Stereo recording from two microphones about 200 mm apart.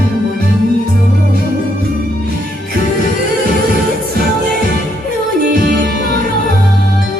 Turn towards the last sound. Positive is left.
turn(degrees=-45)  # may be behind; listen again after turning